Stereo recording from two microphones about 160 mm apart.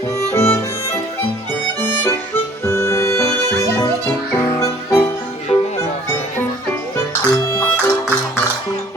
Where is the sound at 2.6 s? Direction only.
15° left (ahead or behind).